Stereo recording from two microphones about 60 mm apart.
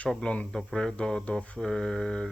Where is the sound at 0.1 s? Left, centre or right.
Centre.